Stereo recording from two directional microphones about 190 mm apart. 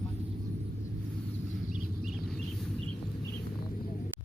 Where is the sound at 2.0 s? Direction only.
Centre (ahead or behind).